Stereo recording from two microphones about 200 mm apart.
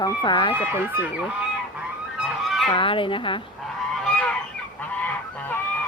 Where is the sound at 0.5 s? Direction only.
10° right (ahead or behind).